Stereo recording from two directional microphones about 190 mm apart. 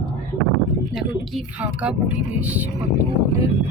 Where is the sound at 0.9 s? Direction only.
Centre (ahead or behind).